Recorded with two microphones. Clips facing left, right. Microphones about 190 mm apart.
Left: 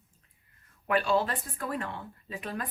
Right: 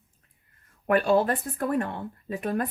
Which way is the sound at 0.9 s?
50° right (ahead or behind).